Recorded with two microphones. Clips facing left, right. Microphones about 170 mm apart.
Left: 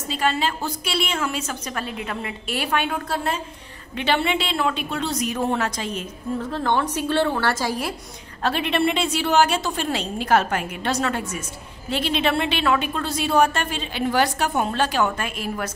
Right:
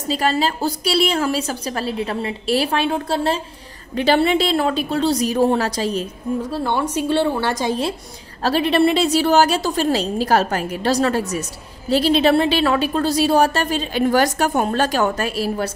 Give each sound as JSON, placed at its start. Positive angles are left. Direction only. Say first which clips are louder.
{"t": 0.1, "sound": "a woman's voice", "louder": "right 4 dB", "side_deg": -35}
{"t": 6.5, "sound": "a woman's voice", "louder": "left 1 dB", "side_deg": -10}
{"t": 8.4, "sound": "a woman's voice", "louder": "right 6 dB", "side_deg": -35}